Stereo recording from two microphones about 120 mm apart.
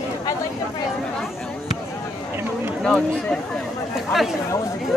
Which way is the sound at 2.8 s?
5° left (ahead or behind).